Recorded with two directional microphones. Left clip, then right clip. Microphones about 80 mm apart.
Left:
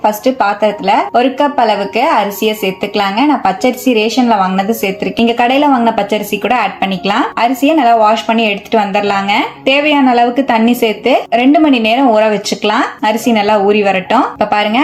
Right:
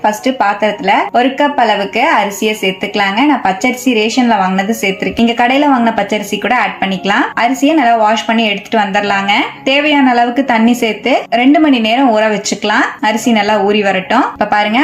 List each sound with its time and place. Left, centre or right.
0.0 s speech: centre
6.8 s a woman's voice: left
8.7 s a woman's voice: left